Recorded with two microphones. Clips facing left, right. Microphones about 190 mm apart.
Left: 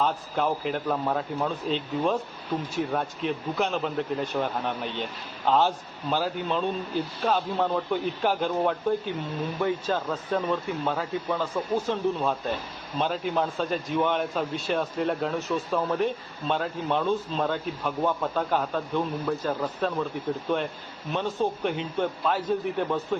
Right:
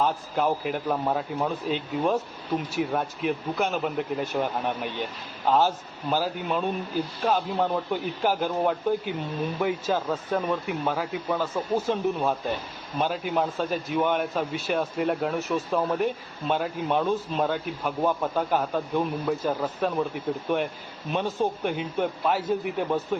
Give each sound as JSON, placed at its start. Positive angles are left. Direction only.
{"t": 0.0, "sound": "speech", "side_deg": -5}
{"t": 9.1, "sound": "speech", "side_deg": -20}
{"t": 9.6, "sound": "a man's voice", "side_deg": -10}
{"t": 21.1, "sound": "speech", "side_deg": -15}